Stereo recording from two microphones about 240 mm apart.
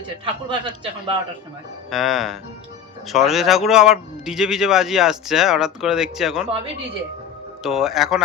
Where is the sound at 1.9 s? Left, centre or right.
Centre.